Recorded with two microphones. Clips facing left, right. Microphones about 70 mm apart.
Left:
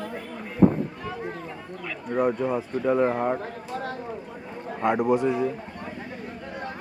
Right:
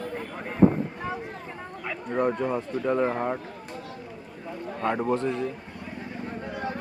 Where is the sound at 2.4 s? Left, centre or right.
Centre.